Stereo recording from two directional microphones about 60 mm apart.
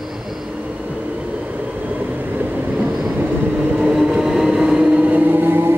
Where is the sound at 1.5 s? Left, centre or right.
Right.